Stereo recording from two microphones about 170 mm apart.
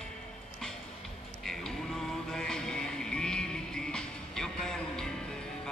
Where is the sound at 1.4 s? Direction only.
Centre (ahead or behind).